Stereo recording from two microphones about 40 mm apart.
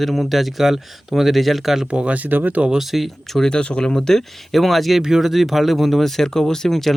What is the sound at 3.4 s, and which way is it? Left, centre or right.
Speech, centre.